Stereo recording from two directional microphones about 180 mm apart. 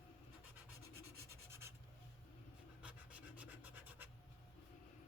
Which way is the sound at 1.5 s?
15° right (ahead or behind).